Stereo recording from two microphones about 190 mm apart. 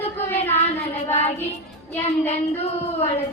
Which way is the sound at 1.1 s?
35° left (ahead or behind).